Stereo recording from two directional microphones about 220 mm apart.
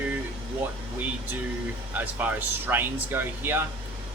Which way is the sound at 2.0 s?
5° right (ahead or behind).